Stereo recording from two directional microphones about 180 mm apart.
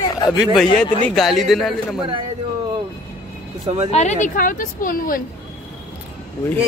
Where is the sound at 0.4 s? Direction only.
Centre (ahead or behind).